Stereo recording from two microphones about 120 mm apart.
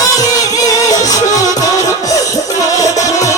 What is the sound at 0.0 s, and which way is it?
Music, 30° left (ahead or behind).